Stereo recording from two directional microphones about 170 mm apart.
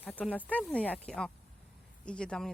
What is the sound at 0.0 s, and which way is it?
Speech, 10° left (ahead or behind).